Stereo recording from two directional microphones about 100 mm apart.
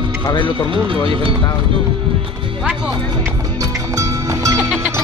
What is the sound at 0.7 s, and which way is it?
Speech, 60° right (ahead or behind).